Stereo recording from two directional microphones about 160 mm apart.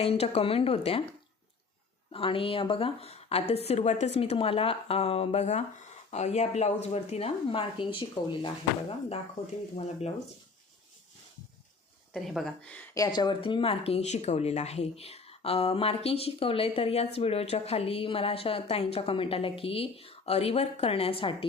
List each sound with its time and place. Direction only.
0.0 s speech: 40° left (ahead or behind)
2.1 s speech: 35° left (ahead or behind)
9.7 s speech: 40° left (ahead or behind)
12.1 s speech: centre (ahead or behind)
12.9 s speech: 25° left (ahead or behind)